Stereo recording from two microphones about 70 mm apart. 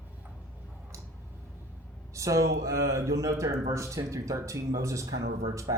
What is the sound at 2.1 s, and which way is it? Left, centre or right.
Speech, right.